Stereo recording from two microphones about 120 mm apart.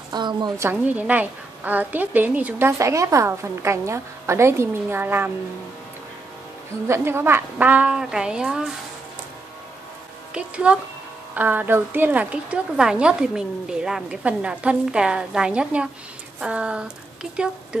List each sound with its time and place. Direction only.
0.1 s a woman's voice: 40° right (ahead or behind)
0.6 s a woman's voice: 15° right (ahead or behind)
2.8 s a woman's voice: 25° right (ahead or behind)
6.9 s a woman's voice: 20° right (ahead or behind)
10.3 s a woman's voice: 10° right (ahead or behind)